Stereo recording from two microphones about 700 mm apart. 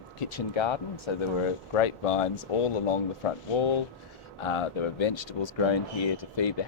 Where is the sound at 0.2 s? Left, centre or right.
Left.